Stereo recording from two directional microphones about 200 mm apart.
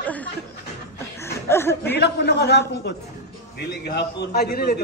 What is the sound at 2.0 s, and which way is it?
A man's voice, 55° left (ahead or behind).